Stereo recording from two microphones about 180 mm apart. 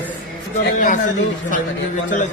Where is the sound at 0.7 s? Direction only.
45° left (ahead or behind).